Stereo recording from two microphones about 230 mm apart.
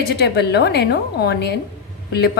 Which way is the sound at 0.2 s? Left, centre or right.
Left.